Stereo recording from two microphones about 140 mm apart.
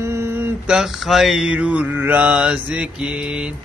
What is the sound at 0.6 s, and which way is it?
Mantra, 5° right (ahead or behind).